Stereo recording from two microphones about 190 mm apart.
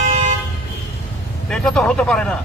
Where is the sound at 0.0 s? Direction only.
40° right (ahead or behind).